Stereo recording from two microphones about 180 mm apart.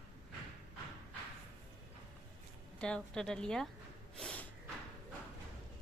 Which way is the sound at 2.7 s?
5° left (ahead or behind).